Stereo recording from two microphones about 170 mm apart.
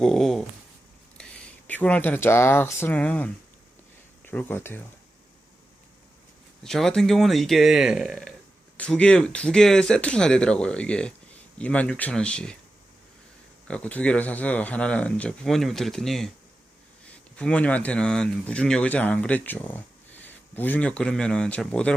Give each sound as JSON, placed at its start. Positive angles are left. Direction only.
{"t": 0.0, "sound": "speech", "side_deg": 0}
{"t": 6.6, "sound": "speech", "side_deg": 0}
{"t": 13.7, "sound": "speech", "side_deg": 5}
{"t": 17.3, "sound": "a man's voice", "side_deg": 5}